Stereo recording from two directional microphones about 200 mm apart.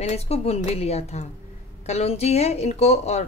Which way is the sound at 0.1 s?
30° left (ahead or behind).